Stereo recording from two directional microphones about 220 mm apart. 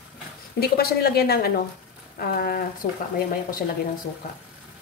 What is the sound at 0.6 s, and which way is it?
Speech, 45° left (ahead or behind).